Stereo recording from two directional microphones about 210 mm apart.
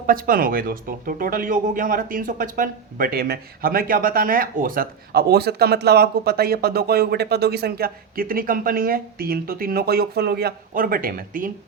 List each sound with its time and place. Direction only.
0.1 s speech: 45° right (ahead or behind)